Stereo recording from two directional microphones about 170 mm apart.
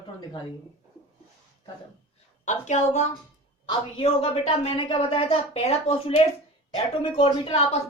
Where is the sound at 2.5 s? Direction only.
45° left (ahead or behind).